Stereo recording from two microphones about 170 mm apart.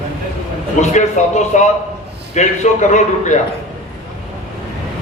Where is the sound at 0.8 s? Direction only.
45° left (ahead or behind).